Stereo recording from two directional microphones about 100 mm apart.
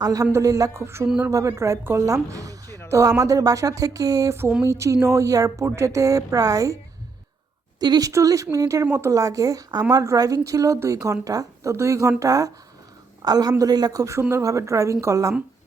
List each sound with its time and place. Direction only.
0.0 s speech: 35° right (ahead or behind)
1.0 s speech: 5° right (ahead or behind)
1.3 s speech: 35° right (ahead or behind)
7.8 s speech: 40° right (ahead or behind)